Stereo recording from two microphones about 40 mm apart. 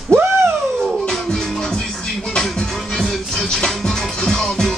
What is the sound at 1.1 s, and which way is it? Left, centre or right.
Music, centre.